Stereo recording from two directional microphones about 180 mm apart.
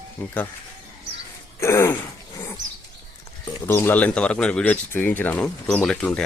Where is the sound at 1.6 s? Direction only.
15° left (ahead or behind).